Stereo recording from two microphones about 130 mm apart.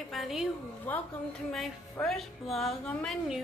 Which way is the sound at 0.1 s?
Centre (ahead or behind).